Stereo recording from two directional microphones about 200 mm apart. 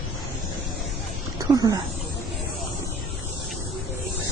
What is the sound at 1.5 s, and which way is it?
Speech, 20° right (ahead or behind).